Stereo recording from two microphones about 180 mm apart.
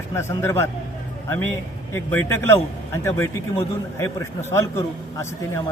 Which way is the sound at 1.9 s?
10° left (ahead or behind).